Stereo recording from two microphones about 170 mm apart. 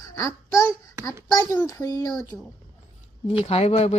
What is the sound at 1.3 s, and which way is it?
Speech, 20° left (ahead or behind).